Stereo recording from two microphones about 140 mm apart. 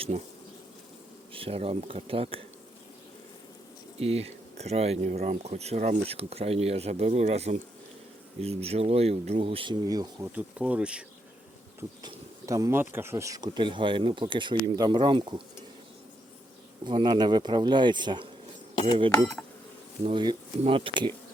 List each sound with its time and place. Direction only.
1.3 s speech: 40° right (ahead or behind)
4.0 s speech: 45° right (ahead or behind)
9.8 s speech: 25° right (ahead or behind)
10.3 s speech: 10° right (ahead or behind)
12.0 s speech: 25° right (ahead or behind)
16.8 s speech: 35° right (ahead or behind)
20.1 s speech: 35° right (ahead or behind)